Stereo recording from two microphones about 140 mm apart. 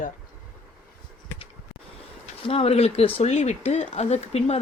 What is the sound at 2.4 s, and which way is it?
Speech, 45° left (ahead or behind).